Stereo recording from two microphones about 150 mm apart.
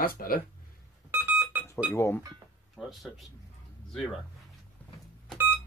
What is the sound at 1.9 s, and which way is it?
Speech, 15° left (ahead or behind).